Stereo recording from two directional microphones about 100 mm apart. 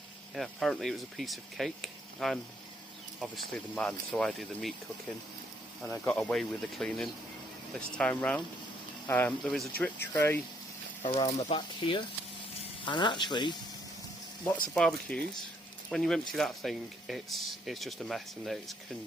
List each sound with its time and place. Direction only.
0.3 s speech: centre (ahead or behind)
3.8 s speech: 10° left (ahead or behind)
6.1 s speech: 5° left (ahead or behind)
11.0 s speech: 75° left (ahead or behind)
11.5 s speech: 55° left (ahead or behind)
14.8 s speech: 5° left (ahead or behind)